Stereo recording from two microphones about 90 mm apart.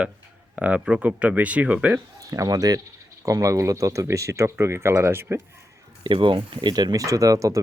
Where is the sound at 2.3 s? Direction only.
40° right (ahead or behind).